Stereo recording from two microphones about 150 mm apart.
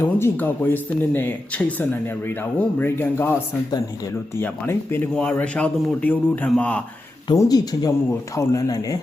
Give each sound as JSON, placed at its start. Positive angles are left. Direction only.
{"t": 0.2, "sound": "speech", "side_deg": 15}
{"t": 4.4, "sound": "speech", "side_deg": 15}
{"t": 7.3, "sound": "speech", "side_deg": 25}